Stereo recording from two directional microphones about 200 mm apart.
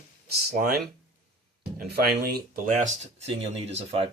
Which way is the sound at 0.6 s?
50° right (ahead or behind).